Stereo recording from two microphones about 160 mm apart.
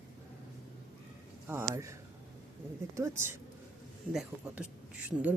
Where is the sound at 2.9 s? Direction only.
15° right (ahead or behind).